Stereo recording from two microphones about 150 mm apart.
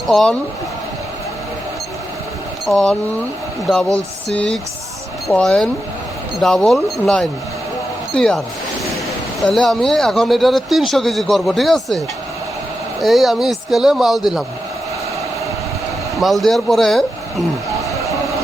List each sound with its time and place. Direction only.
0.1 s speech: 5° left (ahead or behind)
2.6 s speech: centre (ahead or behind)
9.4 s speech: centre (ahead or behind)
13.0 s speech: centre (ahead or behind)
16.1 s speech: centre (ahead or behind)